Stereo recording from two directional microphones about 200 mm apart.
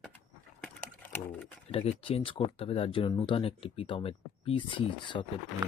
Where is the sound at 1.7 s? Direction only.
30° left (ahead or behind).